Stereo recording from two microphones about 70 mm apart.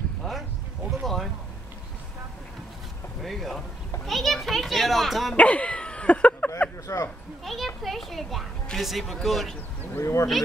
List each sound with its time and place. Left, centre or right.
0.2 s a sound: centre
3.2 s speech: centre
4.0 s children playing: centre
5.3 s a sound: centre
6.9 s speech: left
7.4 s a child's voice: centre
9.9 s speech: left